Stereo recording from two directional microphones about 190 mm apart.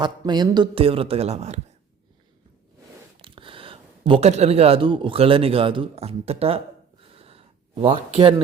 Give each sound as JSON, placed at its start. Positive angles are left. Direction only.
{"t": 0.0, "sound": "speech", "side_deg": -20}
{"t": 3.2, "sound": "speech", "side_deg": -25}
{"t": 7.1, "sound": "a sound", "side_deg": -30}